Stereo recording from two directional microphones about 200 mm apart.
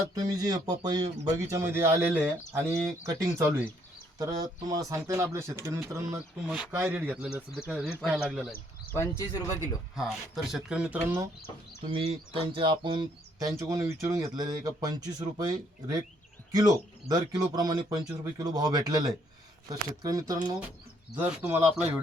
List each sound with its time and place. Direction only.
0.2 s a man's voice: 20° right (ahead or behind); by 8.5 s centre (ahead or behind)
8.9 s speech: 15° left (ahead or behind)
9.9 s speech: centre (ahead or behind)
11.9 s a man's voice: 25° right (ahead or behind); by 21.5 s 10° right (ahead or behind)